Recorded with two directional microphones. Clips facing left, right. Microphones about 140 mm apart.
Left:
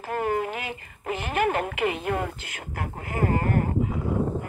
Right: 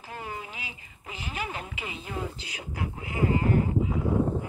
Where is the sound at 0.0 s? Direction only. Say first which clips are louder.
Left 12 dB; 60° left (ahead or behind).